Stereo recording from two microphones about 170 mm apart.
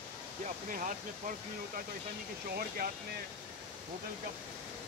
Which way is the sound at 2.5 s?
60° right (ahead or behind).